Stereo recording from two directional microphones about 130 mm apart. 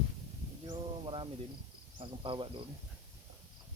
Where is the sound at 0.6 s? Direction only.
40° right (ahead or behind).